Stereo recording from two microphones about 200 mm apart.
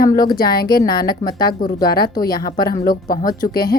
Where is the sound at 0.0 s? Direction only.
45° left (ahead or behind).